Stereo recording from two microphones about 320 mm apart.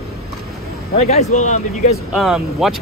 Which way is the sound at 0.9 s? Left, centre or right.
Centre.